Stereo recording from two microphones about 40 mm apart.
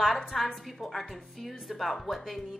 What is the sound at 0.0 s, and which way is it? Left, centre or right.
A woman's voice, centre.